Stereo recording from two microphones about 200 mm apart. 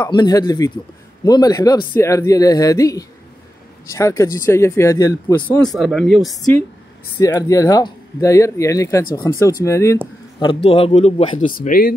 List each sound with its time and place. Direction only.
0.1 s a man's voice: 20° left (ahead or behind)
5.7 s speech: centre (ahead or behind)
7.2 s speech: 15° left (ahead or behind)
10.4 s a man's voice: 30° left (ahead or behind)
11.5 s speech: 45° left (ahead or behind)